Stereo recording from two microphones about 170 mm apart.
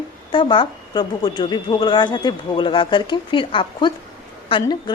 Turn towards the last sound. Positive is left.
turn(degrees=30)  # may be behind; listen again after turning